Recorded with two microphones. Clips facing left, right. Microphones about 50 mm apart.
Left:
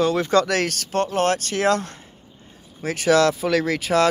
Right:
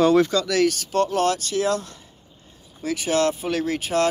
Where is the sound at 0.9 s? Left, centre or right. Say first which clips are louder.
Even; left.